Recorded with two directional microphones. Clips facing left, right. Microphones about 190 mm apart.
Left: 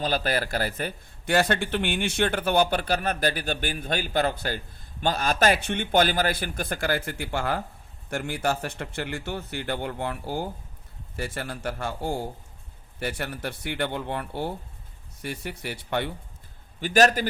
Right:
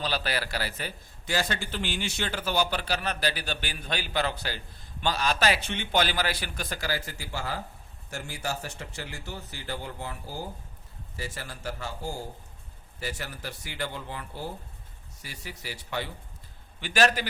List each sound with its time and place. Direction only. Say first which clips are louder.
0.0 s a man's voice: left 5 dB; 50° left (ahead or behind)
16.8 s a man's voice: left 5 dB; 45° left (ahead or behind)